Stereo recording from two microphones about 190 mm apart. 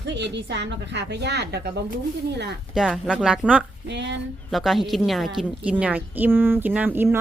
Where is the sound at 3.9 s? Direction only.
65° right (ahead or behind).